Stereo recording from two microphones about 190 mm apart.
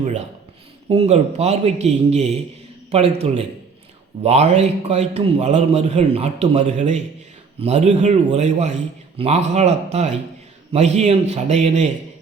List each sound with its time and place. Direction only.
0.9 s a man's voice: 35° right (ahead or behind)